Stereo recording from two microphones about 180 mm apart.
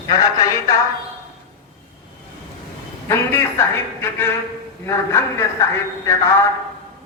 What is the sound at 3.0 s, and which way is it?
A woman's voice, 15° left (ahead or behind).